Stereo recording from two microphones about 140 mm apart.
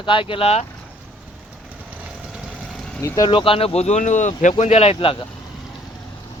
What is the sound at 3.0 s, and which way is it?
Speech, 25° left (ahead or behind).